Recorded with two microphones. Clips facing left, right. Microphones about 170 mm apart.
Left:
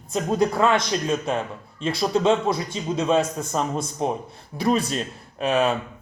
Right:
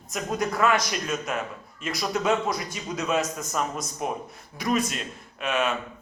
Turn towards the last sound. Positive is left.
turn(degrees=35)  # may be behind; listen again after turning